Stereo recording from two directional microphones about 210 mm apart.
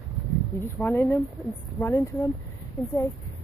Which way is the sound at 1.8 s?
15° left (ahead or behind).